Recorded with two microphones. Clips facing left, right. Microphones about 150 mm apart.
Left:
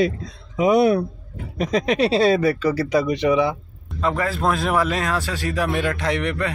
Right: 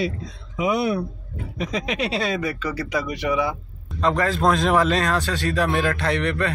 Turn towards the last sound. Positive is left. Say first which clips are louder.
# even
turn(degrees=15)  # may be behind; listen again after turning